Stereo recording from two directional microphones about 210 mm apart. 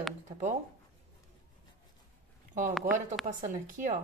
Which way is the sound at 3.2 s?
35° right (ahead or behind).